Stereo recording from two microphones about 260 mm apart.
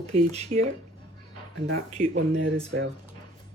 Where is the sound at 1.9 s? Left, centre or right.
Right.